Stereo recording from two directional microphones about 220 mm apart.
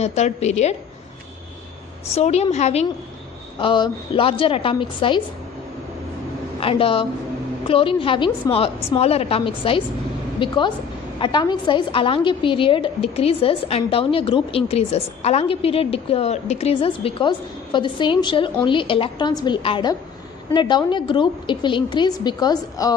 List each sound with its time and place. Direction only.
0.0 s a woman's voice: 30° left (ahead or behind)
2.0 s a woman's voice: 30° left (ahead or behind)
6.6 s a woman's voice: 25° left (ahead or behind)